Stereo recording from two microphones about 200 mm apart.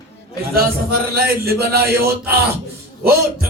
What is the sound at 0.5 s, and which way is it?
Speech, 50° right (ahead or behind).